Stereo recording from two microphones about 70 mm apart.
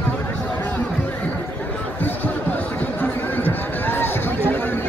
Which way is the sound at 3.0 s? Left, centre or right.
Left.